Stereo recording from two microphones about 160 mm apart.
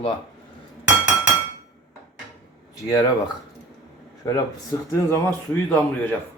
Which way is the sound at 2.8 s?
20° left (ahead or behind).